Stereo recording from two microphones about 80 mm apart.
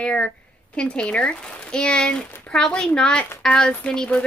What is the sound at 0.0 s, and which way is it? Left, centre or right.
Speech, centre.